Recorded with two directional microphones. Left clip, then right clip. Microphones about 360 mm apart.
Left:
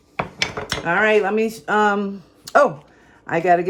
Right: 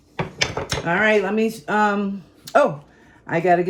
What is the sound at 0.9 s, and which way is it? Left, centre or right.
Speech, left.